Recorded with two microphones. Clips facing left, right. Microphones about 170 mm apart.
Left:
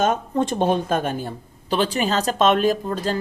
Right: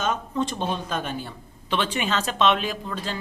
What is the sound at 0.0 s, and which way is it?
Speech, 50° left (ahead or behind).